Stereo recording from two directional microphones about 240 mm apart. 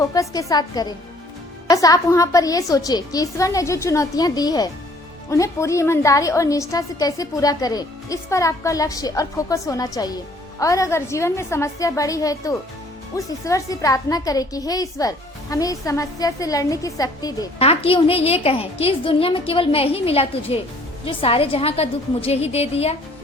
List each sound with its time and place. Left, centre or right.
0.0 s a woman's voice: centre